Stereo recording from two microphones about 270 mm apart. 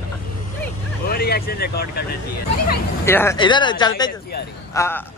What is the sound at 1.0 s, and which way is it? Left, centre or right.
Speech, left.